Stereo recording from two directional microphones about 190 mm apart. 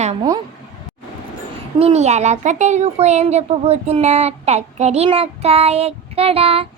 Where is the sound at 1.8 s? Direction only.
35° right (ahead or behind).